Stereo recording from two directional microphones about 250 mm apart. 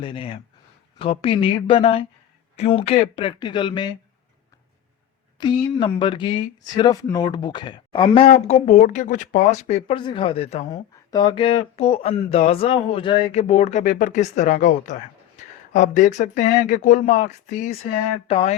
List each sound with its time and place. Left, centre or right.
0.0 s speech: left
5.4 s speech: centre